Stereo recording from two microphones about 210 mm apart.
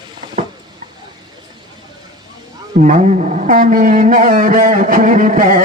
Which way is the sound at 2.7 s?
40° right (ahead or behind).